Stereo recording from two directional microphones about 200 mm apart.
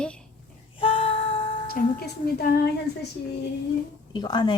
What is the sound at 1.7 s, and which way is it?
Speech, 50° left (ahead or behind).